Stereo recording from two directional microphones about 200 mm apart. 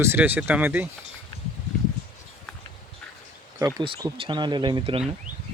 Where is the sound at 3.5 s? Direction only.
20° right (ahead or behind).